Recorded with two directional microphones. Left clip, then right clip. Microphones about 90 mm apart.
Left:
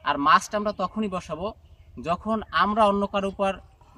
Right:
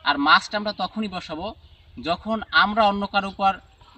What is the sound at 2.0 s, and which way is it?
A man's voice, 20° left (ahead or behind).